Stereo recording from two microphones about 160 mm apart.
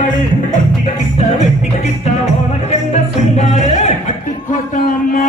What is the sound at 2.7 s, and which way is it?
Music, 45° left (ahead or behind).